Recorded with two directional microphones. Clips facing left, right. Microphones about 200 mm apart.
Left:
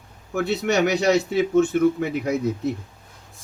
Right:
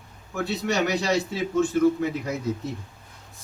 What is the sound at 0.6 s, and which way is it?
Speech, 65° left (ahead or behind).